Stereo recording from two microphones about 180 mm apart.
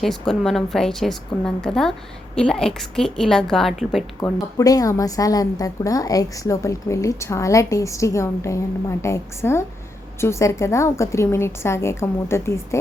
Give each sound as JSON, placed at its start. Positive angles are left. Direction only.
{"t": 0.0, "sound": "a woman's voice", "side_deg": 0}
{"t": 4.2, "sound": "a woman's voice", "side_deg": 20}